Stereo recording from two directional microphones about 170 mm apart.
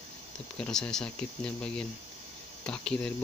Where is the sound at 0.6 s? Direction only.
5° left (ahead or behind).